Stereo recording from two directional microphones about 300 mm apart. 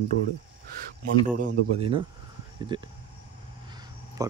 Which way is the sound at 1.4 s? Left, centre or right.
Centre.